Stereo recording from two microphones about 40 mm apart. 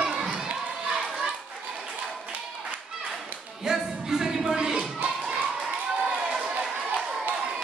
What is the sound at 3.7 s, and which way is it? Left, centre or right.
Music, centre.